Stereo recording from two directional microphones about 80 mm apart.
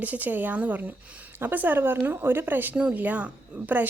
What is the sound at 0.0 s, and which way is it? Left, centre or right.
A woman's voice, right.